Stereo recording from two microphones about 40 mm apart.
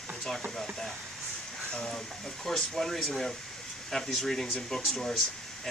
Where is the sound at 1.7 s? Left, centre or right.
Left.